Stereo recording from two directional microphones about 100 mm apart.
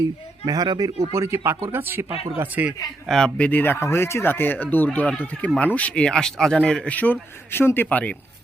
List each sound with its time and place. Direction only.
0.0 s speech: 40° right (ahead or behind)
1.1 s a man's voice: 30° right (ahead or behind)
3.1 s speech: 5° left (ahead or behind)